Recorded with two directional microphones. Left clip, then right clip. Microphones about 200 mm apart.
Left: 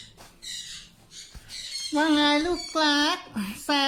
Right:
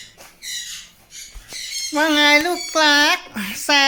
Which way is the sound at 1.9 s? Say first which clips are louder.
Right 8 dB; centre (ahead or behind).